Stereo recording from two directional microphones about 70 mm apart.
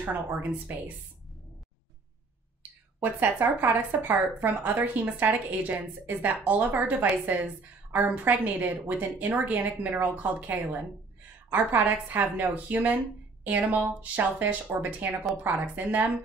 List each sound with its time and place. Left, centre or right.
0.0 s a woman's voice: right
3.0 s a woman's voice: right